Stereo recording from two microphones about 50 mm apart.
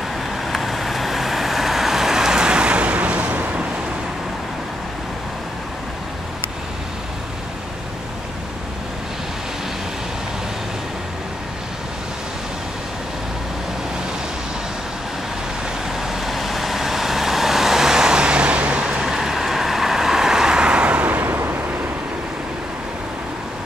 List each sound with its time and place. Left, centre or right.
0.5 s vehicle: centre; by 3.6 s right
16.0 s vehicle: centre; by 21.4 s right
21.4 s vehicle: right